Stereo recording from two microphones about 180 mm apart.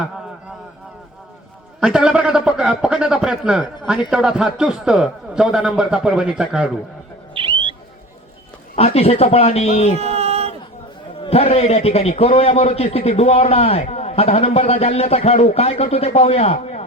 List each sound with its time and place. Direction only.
1.8 s a man's voice: 5° right (ahead or behind)
7.3 s owl: 30° right (ahead or behind)
8.7 s a man's voice: 35° left (ahead or behind)
9.9 s a sound: 35° right (ahead or behind)
11.2 s a man's voice: 35° left (ahead or behind)